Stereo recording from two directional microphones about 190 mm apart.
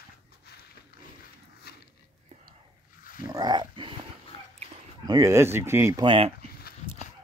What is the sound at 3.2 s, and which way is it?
Dog, 20° right (ahead or behind).